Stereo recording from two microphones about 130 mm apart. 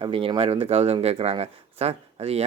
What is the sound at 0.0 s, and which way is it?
Speech, 40° right (ahead or behind).